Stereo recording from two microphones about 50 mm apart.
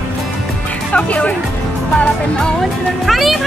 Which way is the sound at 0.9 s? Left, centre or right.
Left.